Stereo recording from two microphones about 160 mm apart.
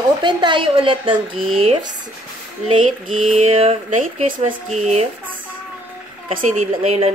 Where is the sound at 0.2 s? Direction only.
30° right (ahead or behind).